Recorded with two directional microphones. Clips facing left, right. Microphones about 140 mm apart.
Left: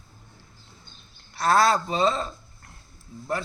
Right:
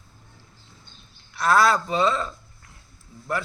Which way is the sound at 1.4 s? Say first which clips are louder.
Right 1 dB; 30° left (ahead or behind).